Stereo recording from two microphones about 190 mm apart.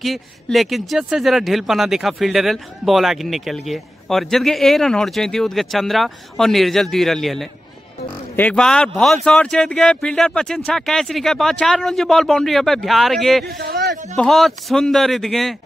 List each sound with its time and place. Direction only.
0.0 s speech: centre (ahead or behind)
13.5 s a man's voice: 55° right (ahead or behind)
14.1 s speech: centre (ahead or behind)